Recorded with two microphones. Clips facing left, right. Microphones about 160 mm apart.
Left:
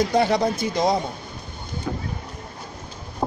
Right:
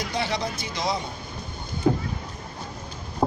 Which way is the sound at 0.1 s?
50° left (ahead or behind).